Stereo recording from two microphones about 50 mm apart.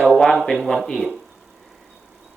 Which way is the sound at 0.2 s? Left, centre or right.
Centre.